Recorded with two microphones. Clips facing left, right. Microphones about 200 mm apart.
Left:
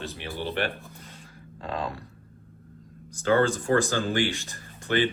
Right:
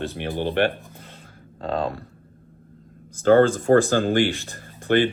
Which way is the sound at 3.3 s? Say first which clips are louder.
Right 7 dB; 50° right (ahead or behind).